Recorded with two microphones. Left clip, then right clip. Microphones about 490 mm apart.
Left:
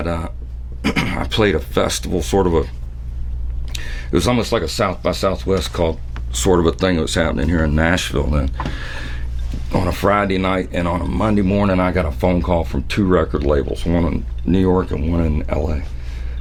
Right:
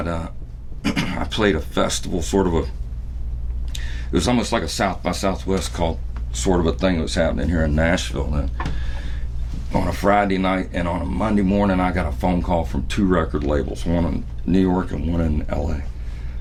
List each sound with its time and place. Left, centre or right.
0.0 s a sound: left
0.8 s speech: left
3.7 s speech: left